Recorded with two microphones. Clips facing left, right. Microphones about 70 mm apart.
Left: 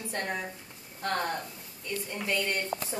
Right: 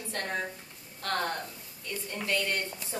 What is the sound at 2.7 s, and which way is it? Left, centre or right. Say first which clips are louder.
Speech: left 10 dB; left.